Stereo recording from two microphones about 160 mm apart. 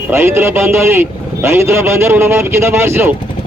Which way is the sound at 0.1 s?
15° right (ahead or behind).